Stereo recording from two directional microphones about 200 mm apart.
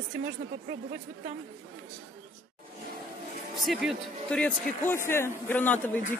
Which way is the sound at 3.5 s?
Centre (ahead or behind).